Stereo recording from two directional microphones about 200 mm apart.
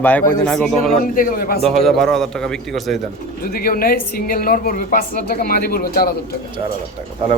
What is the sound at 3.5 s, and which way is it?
A woman's voice, 50° left (ahead or behind).